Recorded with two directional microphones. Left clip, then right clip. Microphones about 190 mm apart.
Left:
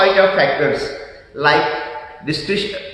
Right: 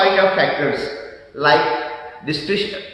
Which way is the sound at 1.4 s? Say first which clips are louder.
Even; 10° left (ahead or behind).